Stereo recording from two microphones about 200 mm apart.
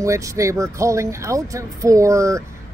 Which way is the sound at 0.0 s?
15° right (ahead or behind).